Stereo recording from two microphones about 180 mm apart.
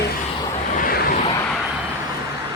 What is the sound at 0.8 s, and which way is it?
Vehicle, 55° left (ahead or behind).